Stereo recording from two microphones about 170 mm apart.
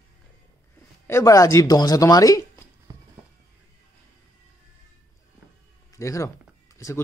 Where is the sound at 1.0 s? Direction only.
15° left (ahead or behind).